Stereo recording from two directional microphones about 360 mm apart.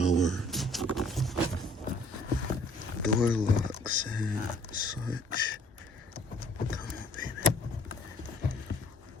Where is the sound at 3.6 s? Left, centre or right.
Right.